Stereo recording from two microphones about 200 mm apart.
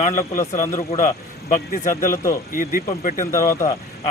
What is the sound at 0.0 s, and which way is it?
Speech, 40° left (ahead or behind).